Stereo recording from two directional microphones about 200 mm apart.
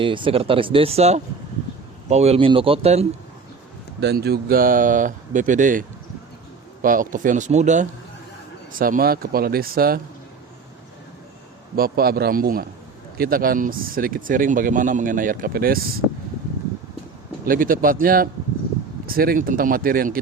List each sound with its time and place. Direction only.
0.0 s speech: 25° right (ahead or behind)
4.0 s speech: 55° right (ahead or behind)
6.8 s speech: 40° right (ahead or behind)
11.8 s speech: 50° right (ahead or behind)
17.4 s speech: 45° right (ahead or behind)